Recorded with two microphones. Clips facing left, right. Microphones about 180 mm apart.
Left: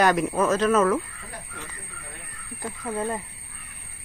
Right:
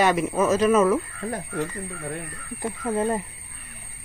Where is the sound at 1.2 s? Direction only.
60° right (ahead or behind).